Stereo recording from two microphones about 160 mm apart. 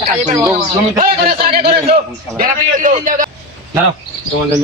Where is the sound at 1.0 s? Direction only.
65° right (ahead or behind).